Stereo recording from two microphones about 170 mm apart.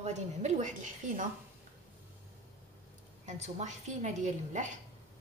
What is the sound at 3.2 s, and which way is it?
A woman's voice, 40° right (ahead or behind).